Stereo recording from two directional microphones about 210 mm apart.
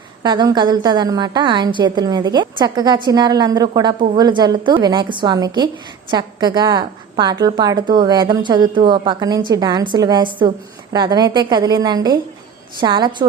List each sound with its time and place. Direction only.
0.2 s a woman's voice: 20° right (ahead or behind)